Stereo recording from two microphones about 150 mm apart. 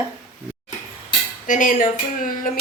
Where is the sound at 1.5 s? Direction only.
60° left (ahead or behind).